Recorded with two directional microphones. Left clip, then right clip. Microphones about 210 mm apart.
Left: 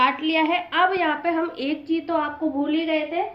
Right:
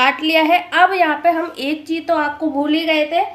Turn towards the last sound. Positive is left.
turn(degrees=-55)  # may be behind; listen again after turning